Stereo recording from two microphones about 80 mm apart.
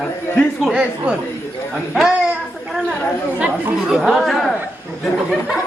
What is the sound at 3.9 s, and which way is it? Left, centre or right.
Speech, centre.